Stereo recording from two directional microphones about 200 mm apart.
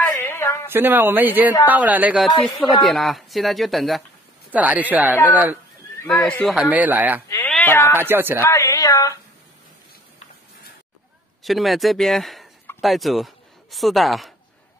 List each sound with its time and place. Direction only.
0.0 s a sound: 10° left (ahead or behind)
0.7 s speech: 10° right (ahead or behind)
6.0 s speech: 5° left (ahead or behind)
7.2 s speech: 10° left (ahead or behind)
7.9 s speech: 10° right (ahead or behind)
8.4 s a sound: 15° left (ahead or behind)
11.4 s a man's voice: centre (ahead or behind)